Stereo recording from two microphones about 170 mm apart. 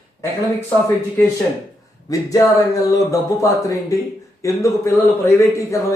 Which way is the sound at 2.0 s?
20° left (ahead or behind).